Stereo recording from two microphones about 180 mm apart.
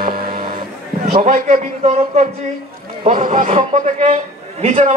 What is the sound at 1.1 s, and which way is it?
A man's voice, 40° right (ahead or behind).